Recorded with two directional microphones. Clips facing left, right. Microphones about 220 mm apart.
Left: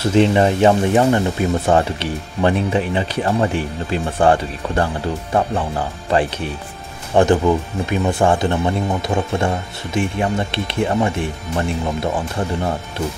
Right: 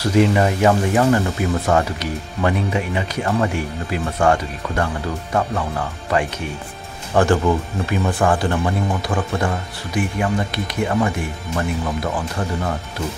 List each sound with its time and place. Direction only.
0.0 s speech: 25° left (ahead or behind)
7.2 s speech: 20° left (ahead or behind)